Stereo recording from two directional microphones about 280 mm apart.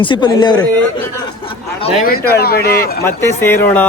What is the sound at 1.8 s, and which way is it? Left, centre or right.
Speech, left.